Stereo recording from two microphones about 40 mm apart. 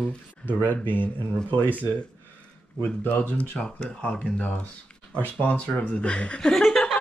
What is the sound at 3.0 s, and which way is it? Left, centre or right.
Speech, left.